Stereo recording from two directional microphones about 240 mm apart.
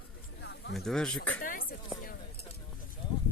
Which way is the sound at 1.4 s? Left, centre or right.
Left.